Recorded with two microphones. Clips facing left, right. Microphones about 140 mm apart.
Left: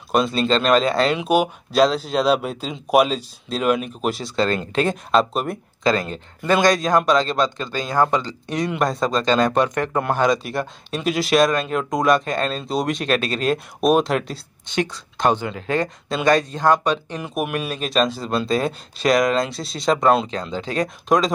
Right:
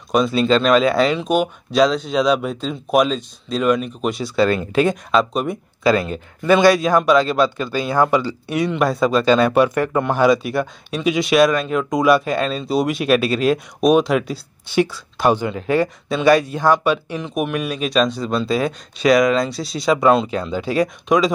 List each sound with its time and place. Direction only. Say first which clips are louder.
0.1 s speech: right 3 dB; centre (ahead or behind)
1.1 s speech: even; 10° left (ahead or behind); by 17.2 s 5° right (ahead or behind)
17.2 s speech: right 3 dB; 5° left (ahead or behind)